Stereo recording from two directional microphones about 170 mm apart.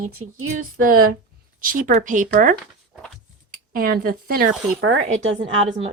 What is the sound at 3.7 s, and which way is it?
Speech, 60° right (ahead or behind).